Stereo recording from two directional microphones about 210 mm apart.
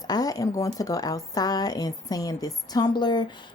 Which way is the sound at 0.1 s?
15° left (ahead or behind).